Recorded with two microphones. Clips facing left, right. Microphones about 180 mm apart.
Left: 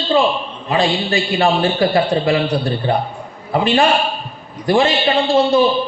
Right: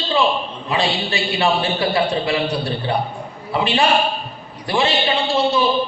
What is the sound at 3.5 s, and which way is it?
A man's voice, 45° left (ahead or behind).